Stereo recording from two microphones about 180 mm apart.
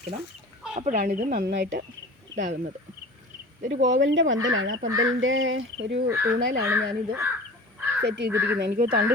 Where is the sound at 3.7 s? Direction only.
90° right.